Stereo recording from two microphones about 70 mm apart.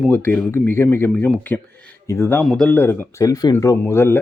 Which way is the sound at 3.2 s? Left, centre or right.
Left.